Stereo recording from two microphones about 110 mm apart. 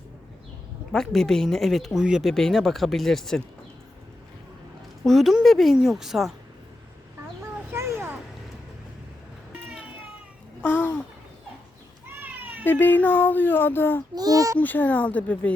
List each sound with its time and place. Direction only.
0.9 s speech: 5° left (ahead or behind)
5.0 s speech: centre (ahead or behind)
7.7 s a sound: 25° right (ahead or behind)
10.6 s babbling: 15° left (ahead or behind)
12.0 s cat: 20° right (ahead or behind)
12.6 s speech: 15° left (ahead or behind)
14.2 s a child's voice: 35° right (ahead or behind)
14.6 s speech: 15° left (ahead or behind)